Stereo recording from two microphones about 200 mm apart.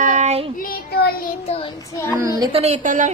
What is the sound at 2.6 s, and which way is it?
Speech, 35° right (ahead or behind).